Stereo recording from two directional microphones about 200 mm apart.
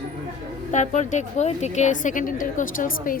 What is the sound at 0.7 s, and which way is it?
A woman's voice, 35° left (ahead or behind).